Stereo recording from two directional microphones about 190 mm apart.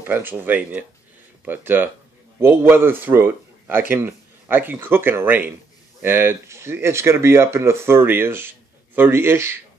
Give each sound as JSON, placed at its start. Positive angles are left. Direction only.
{"t": 0.0, "sound": "speech", "side_deg": -10}